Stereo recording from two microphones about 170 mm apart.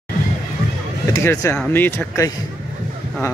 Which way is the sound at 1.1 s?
15° left (ahead or behind).